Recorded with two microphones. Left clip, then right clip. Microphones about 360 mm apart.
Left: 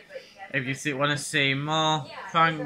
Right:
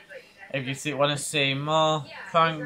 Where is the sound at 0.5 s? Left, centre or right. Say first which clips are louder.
Left 2 dB; centre.